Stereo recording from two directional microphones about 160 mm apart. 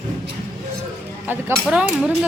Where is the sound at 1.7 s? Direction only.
5° right (ahead or behind).